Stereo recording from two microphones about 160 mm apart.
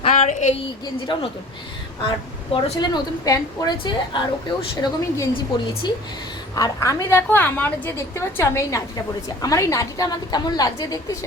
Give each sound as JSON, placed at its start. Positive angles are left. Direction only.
{"t": 0.0, "sound": "a sound", "side_deg": 45}
{"t": 1.1, "sound": "a woman's voice", "side_deg": 30}
{"t": 2.5, "sound": "a woman's voice", "side_deg": 30}